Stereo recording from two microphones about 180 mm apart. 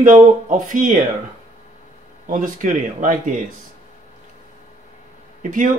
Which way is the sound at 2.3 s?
45° right (ahead or behind).